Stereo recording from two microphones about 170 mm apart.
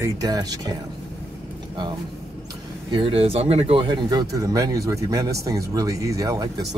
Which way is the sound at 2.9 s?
30° right (ahead or behind).